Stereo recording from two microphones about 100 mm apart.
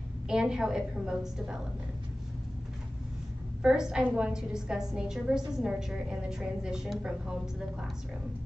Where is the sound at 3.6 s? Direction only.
5° right (ahead or behind).